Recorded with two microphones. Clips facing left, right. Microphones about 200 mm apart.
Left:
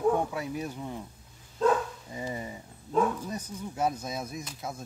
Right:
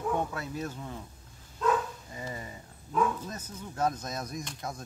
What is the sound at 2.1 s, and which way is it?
Speech, 20° left (ahead or behind).